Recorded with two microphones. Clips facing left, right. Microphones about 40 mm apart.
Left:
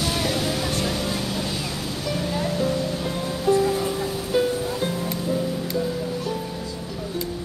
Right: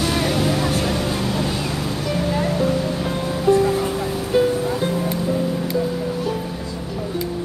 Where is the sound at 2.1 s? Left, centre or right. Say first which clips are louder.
Right 4 dB; right.